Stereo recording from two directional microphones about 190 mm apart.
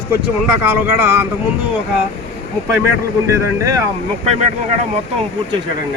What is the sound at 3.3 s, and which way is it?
Speech, 15° right (ahead or behind).